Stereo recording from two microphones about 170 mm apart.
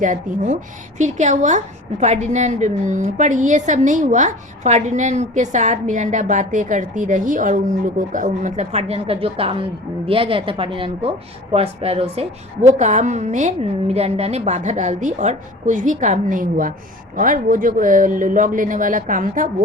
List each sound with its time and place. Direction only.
0.0 s a woman's voice: 50° right (ahead or behind)